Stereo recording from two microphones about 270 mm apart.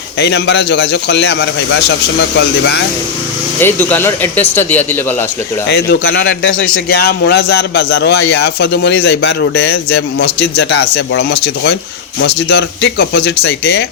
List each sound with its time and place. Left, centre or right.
0.2 s a man's voice: left
3.6 s speech: centre
5.6 s a man's voice: left